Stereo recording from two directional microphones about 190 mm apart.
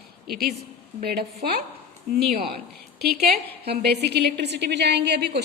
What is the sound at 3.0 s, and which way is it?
A woman's voice, 55° right (ahead or behind).